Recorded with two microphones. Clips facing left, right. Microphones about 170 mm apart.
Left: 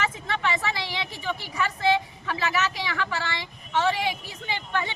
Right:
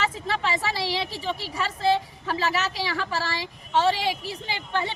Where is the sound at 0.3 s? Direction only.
35° right (ahead or behind).